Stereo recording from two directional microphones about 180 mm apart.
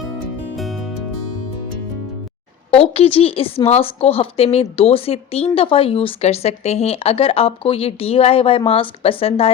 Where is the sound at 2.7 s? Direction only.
30° left (ahead or behind).